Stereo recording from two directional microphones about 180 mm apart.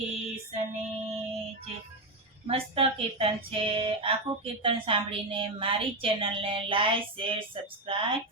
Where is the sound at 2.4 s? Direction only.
30° right (ahead or behind).